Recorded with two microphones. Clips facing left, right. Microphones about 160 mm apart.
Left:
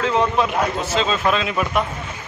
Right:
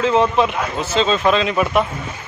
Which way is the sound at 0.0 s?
Centre (ahead or behind).